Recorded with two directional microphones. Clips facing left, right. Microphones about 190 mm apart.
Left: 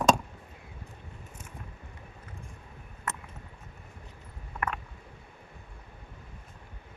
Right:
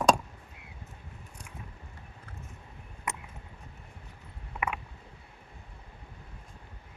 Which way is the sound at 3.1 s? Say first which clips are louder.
Even; 15° right (ahead or behind).